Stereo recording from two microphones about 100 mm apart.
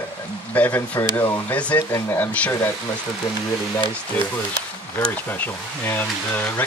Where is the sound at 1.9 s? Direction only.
30° left (ahead or behind).